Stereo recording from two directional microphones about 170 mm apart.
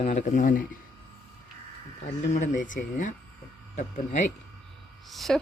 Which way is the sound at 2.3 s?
45° left (ahead or behind).